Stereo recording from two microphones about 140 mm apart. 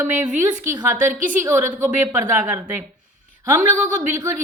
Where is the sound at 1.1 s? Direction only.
70° right (ahead or behind).